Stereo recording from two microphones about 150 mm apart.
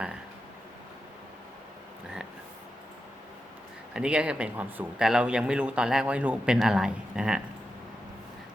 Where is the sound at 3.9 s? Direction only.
5° right (ahead or behind).